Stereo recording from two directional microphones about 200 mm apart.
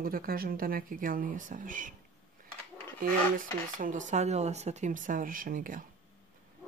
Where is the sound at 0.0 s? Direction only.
45° right (ahead or behind).